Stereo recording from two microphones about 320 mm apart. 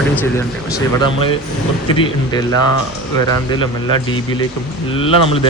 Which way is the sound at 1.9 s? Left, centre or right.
Centre.